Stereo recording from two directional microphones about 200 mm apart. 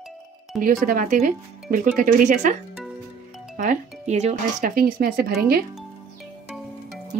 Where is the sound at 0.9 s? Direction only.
40° right (ahead or behind).